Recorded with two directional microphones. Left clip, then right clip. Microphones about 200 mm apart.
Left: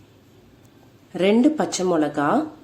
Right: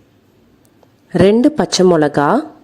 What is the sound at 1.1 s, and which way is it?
Speech, 40° right (ahead or behind).